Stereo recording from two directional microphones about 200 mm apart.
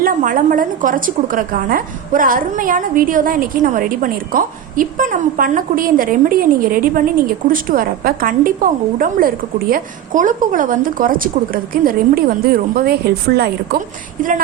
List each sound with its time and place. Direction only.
0.0 s a woman's voice: 40° right (ahead or behind)
14.2 s speech: 40° right (ahead or behind)